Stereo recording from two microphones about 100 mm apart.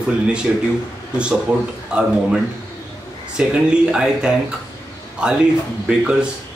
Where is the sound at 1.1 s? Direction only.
10° right (ahead or behind).